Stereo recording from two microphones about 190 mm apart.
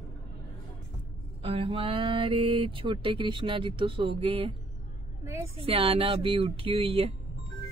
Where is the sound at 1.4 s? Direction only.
30° right (ahead or behind).